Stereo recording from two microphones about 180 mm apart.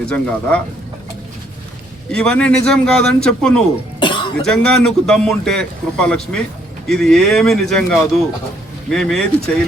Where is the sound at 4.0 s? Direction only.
25° left (ahead or behind).